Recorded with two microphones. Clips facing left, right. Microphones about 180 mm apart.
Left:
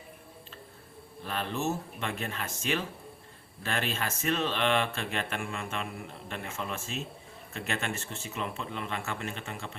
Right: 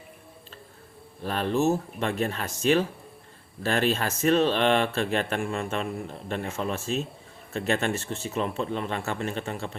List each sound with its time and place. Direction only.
1.2 s speech: 40° right (ahead or behind)